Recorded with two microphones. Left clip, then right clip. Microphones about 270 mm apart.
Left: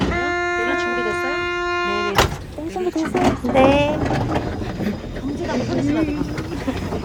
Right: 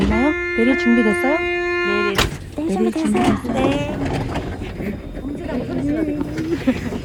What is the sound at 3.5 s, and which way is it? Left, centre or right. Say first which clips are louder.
Speech: left 11 dB; left.